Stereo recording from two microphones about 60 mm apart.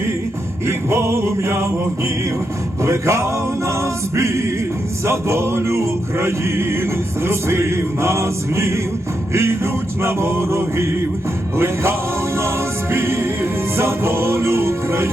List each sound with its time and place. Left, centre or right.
0.7 s music: right
2.8 s music: right